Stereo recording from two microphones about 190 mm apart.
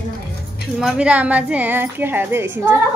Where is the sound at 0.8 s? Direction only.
5° right (ahead or behind).